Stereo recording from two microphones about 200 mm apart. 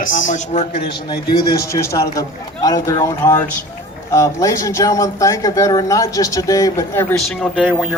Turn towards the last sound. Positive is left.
turn(degrees=5)  # may be behind; listen again after turning